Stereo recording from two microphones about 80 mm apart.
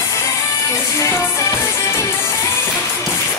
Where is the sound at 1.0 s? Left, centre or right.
Left.